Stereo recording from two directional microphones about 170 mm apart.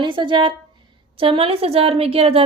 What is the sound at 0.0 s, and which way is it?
A woman's voice, 30° right (ahead or behind).